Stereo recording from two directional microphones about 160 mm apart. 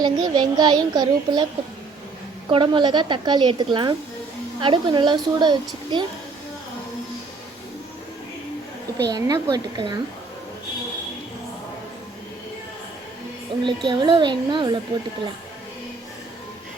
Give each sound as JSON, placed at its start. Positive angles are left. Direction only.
{"t": 0.0, "sound": "a woman's voice", "side_deg": -25}
{"t": 2.5, "sound": "a woman's voice", "side_deg": -30}
{"t": 9.0, "sound": "a woman's voice", "side_deg": -25}
{"t": 13.7, "sound": "a woman's voice", "side_deg": -30}